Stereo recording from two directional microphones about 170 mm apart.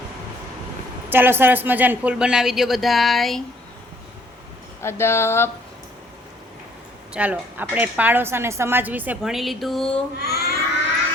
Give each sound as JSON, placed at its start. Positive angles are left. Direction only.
{"t": 1.1, "sound": "speech", "side_deg": -10}
{"t": 4.8, "sound": "speech", "side_deg": 15}
{"t": 7.1, "sound": "a woman's voice", "side_deg": -10}
{"t": 10.2, "sound": "a child's voice", "side_deg": 70}